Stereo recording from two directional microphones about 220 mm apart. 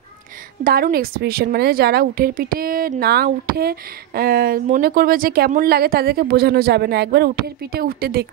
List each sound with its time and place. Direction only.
0.7 s a woman's voice: 40° right (ahead or behind)